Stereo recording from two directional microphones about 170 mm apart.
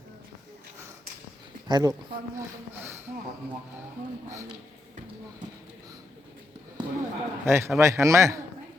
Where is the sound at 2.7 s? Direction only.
15° right (ahead or behind).